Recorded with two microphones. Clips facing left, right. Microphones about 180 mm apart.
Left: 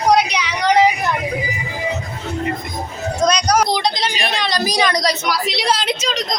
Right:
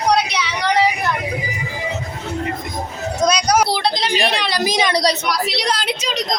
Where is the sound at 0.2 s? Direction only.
15° left (ahead or behind).